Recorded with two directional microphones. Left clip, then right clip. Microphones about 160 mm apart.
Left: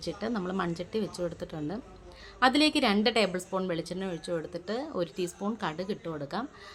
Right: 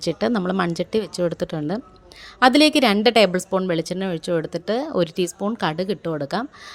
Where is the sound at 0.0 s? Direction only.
50° right (ahead or behind).